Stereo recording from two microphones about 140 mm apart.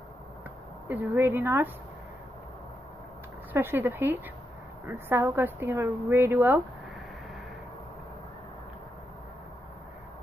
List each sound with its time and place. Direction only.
0.8 s a woman's voice: 15° right (ahead or behind)
3.5 s a woman's voice: 15° right (ahead or behind)